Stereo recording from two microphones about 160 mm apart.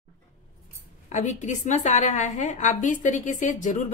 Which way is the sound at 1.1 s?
50° left (ahead or behind).